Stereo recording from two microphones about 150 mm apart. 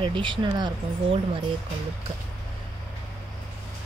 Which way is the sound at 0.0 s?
35° right (ahead or behind).